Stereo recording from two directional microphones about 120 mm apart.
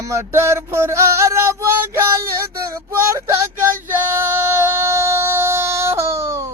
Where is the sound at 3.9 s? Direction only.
20° right (ahead or behind).